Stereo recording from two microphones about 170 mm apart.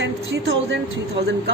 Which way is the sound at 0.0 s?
90° right.